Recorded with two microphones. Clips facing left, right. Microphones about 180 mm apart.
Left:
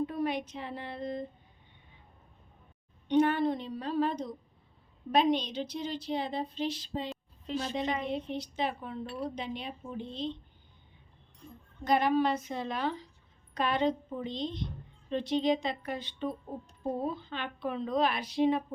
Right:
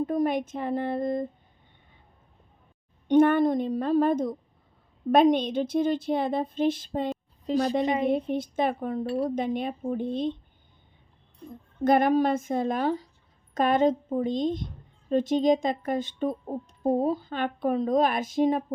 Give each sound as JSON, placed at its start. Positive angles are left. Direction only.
{"t": 0.0, "sound": "speech", "side_deg": -45}
{"t": 3.1, "sound": "speech", "side_deg": -50}
{"t": 7.4, "sound": "a woman's voice", "side_deg": -35}
{"t": 8.0, "sound": "speech", "side_deg": -50}
{"t": 11.9, "sound": "speech", "side_deg": -50}